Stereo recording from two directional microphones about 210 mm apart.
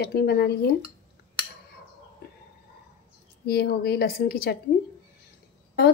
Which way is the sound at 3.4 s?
50° left (ahead or behind).